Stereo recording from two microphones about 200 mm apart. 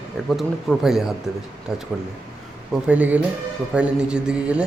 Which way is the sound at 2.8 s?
5° right (ahead or behind).